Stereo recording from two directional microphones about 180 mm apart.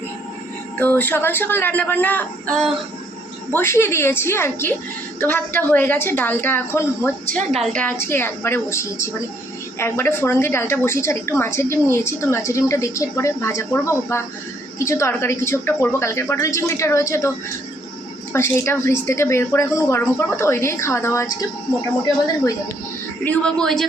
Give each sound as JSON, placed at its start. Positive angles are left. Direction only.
{"t": 0.8, "sound": "a woman's voice", "side_deg": 10}
{"t": 3.5, "sound": "a woman's voice", "side_deg": 15}
{"t": 7.3, "sound": "a woman's voice", "side_deg": -50}
{"t": 7.6, "sound": "a woman's voice", "side_deg": 5}
{"t": 18.3, "sound": "a woman's voice", "side_deg": 15}
{"t": 23.2, "sound": "speech", "side_deg": 5}